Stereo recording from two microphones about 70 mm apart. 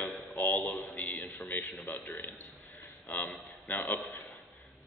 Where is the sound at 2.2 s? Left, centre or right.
Left.